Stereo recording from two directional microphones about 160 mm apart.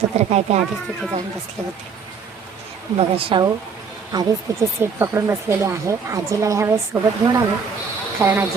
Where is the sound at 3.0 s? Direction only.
35° right (ahead or behind).